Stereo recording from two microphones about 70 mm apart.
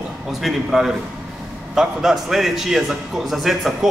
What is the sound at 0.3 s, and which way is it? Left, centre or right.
A man's voice, centre.